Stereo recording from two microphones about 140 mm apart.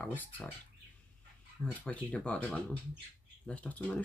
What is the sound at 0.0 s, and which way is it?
Speech, 15° left (ahead or behind).